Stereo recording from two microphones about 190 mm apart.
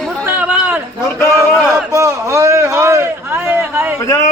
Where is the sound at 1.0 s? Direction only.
15° left (ahead or behind).